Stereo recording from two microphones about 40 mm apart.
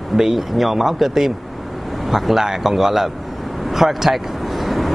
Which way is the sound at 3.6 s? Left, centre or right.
Centre.